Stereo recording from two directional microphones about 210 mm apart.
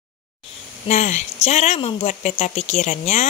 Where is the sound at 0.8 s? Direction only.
35° left (ahead or behind).